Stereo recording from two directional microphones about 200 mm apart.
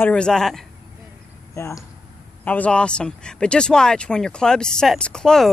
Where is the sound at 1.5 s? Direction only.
15° left (ahead or behind).